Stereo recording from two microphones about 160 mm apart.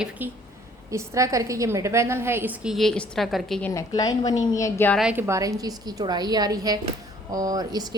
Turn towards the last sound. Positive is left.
turn(degrees=-25)  # may be behind; listen again after turning